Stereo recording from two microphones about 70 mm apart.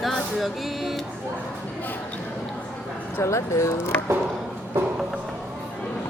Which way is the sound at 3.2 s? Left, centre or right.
Left.